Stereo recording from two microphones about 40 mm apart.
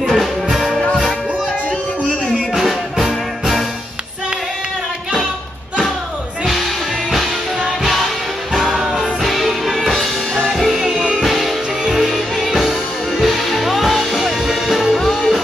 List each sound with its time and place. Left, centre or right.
0.1 s music: centre
2.3 s music: centre
8.5 s music: centre
11.0 s music: centre
11.2 s music: centre
15.0 s music: centre